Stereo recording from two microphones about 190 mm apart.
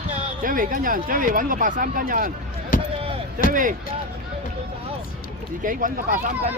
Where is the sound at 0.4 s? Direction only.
45° right (ahead or behind).